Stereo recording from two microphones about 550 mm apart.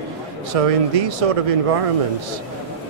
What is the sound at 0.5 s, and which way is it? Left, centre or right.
Speech, right.